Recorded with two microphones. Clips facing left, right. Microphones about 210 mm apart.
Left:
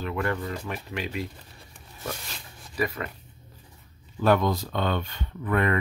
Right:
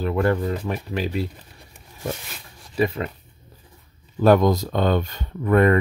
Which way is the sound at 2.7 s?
25° right (ahead or behind).